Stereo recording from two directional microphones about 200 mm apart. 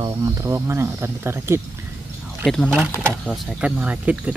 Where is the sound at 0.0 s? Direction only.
15° right (ahead or behind).